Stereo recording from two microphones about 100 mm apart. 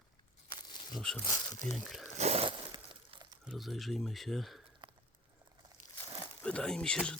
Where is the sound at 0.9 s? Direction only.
5° left (ahead or behind).